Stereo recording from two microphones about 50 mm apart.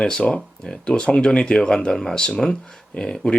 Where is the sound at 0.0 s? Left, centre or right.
Centre.